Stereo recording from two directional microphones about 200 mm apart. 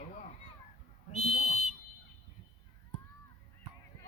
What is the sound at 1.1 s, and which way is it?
Speech, 35° left (ahead or behind).